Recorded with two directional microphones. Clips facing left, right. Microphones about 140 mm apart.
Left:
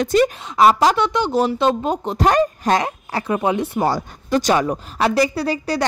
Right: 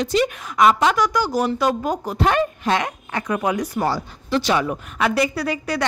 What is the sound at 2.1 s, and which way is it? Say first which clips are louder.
A woman's voice: left 4 dB; 40° left (ahead or behind).